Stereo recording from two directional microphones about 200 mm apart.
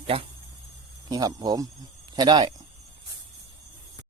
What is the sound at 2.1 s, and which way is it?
Cricket, 20° right (ahead or behind).